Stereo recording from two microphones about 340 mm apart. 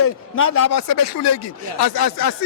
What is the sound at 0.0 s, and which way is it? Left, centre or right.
Speech, left.